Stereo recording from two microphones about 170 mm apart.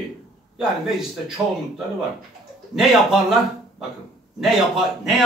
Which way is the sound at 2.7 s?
Centre (ahead or behind).